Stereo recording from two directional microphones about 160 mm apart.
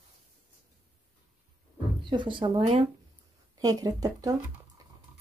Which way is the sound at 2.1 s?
30° right (ahead or behind).